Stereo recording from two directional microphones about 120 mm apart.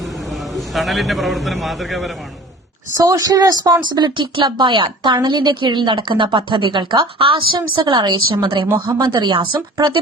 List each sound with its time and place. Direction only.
0.0 s a man's voice: centre (ahead or behind)
3.0 s a woman's voice: 30° right (ahead or behind)